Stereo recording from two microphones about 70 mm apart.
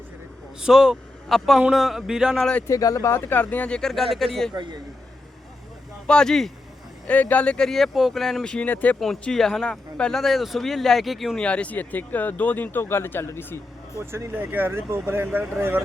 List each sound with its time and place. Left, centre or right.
0.6 s speech: centre
2.6 s speech: left
3.1 s speech: left
3.4 s speech: centre
3.8 s speech: centre
4.5 s speech: right
6.1 s speech: centre
7.1 s speech: left; by 8.5 s centre
8.5 s speech: left
9.2 s speech: centre
11.3 s speech: centre; by 13.6 s left
14.0 s speech: right